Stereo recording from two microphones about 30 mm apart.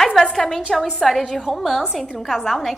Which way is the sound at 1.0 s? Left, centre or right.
Centre.